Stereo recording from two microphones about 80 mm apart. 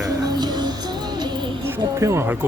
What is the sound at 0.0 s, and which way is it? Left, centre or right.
Music, right.